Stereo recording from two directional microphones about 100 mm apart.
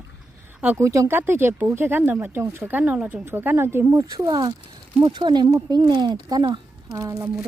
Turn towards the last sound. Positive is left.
turn(degrees=-35)  # may be behind; listen again after turning